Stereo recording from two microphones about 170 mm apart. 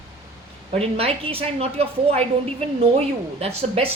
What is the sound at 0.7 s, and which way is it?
A woman's voice, 35° right (ahead or behind).